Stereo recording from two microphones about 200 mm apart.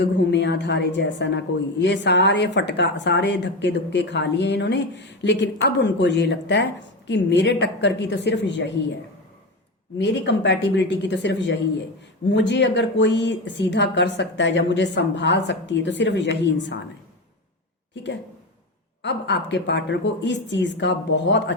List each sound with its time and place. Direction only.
0.0 s a woman's voice: 60° left (ahead or behind)
10.0 s a woman's voice: 65° left (ahead or behind)
17.9 s a woman's voice: 60° left (ahead or behind)